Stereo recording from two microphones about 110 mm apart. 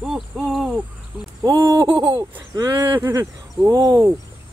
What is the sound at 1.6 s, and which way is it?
Speech, 30° right (ahead or behind).